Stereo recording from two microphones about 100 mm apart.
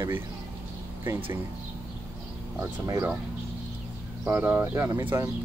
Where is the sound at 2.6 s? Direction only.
30° right (ahead or behind).